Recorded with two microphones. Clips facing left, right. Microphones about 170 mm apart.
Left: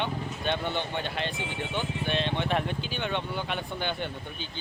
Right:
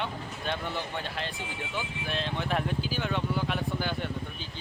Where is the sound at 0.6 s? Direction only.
25° left (ahead or behind).